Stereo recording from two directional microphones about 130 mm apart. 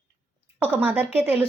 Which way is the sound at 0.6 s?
15° right (ahead or behind).